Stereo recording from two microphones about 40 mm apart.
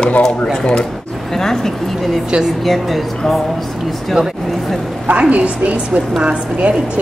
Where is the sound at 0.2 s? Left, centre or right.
Centre.